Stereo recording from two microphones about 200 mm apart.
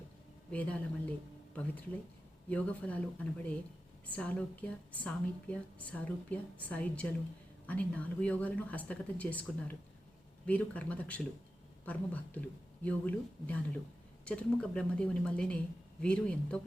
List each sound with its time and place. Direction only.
0.5 s a woman's voice: 5° left (ahead or behind)
2.5 s a woman's voice: 5° left (ahead or behind)